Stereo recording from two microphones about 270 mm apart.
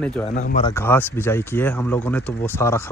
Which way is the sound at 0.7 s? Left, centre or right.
Centre.